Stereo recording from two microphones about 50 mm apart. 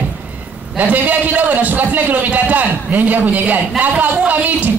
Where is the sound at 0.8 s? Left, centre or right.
Right.